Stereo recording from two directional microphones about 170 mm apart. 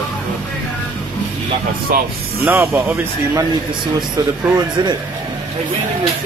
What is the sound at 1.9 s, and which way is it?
Speech, 55° right (ahead or behind).